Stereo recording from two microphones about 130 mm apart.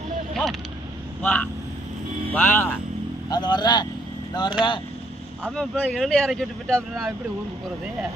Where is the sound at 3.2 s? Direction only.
35° left (ahead or behind).